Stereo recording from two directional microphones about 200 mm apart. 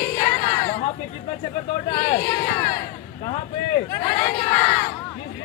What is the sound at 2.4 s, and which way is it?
Speech, 20° left (ahead or behind).